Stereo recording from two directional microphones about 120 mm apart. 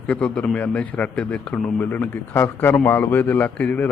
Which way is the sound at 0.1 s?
10° left (ahead or behind).